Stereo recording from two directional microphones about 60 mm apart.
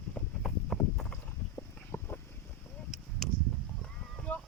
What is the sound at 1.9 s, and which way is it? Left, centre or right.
Boat, left.